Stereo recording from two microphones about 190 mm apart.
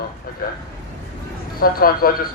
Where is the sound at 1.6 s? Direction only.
50° left (ahead or behind).